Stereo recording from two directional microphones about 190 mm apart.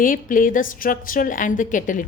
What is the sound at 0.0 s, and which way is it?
A woman's voice, 45° left (ahead or behind).